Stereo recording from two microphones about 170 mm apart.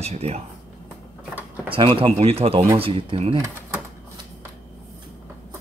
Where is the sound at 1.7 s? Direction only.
30° right (ahead or behind).